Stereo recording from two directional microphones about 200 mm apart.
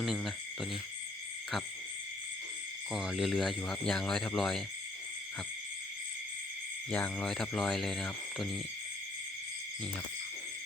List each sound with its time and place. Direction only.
0.0 s cricket: centre (ahead or behind)
2.9 s speech: centre (ahead or behind)
6.9 s speech: 5° left (ahead or behind)